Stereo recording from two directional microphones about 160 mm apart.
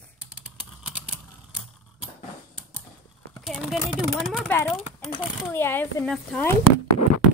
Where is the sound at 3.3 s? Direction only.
Centre (ahead or behind).